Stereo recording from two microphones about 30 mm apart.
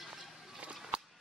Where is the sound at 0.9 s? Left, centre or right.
Right.